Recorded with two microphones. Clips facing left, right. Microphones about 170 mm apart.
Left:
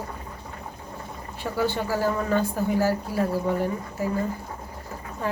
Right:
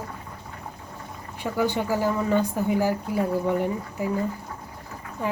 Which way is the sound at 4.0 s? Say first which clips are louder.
Even; 15° right (ahead or behind).